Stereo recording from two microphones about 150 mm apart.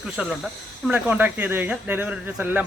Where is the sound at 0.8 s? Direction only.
10° right (ahead or behind).